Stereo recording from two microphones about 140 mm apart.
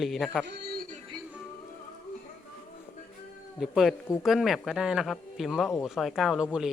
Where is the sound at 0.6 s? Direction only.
90° right.